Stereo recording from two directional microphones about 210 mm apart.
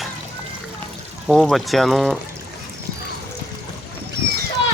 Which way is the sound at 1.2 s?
Centre (ahead or behind).